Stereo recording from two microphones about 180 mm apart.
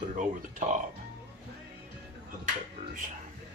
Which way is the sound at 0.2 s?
45° right (ahead or behind).